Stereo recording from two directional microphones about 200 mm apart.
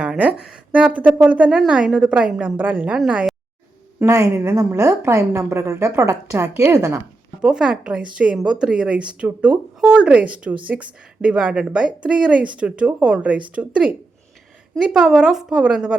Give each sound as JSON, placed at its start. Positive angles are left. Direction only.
{"t": 0.0, "sound": "speech", "side_deg": -5}
{"t": 4.0, "sound": "a woman's voice", "side_deg": -15}
{"t": 7.4, "sound": "speech", "side_deg": -5}